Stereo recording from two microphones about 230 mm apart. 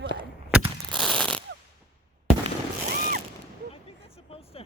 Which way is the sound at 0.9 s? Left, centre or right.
Centre.